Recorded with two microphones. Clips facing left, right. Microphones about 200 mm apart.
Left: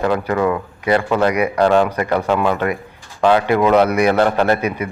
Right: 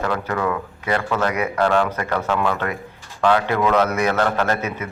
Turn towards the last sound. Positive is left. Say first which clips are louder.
# left 5 dB
turn(degrees=10)  # may be behind; listen again after turning